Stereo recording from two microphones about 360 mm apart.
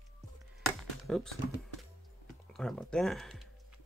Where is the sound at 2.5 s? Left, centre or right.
Centre.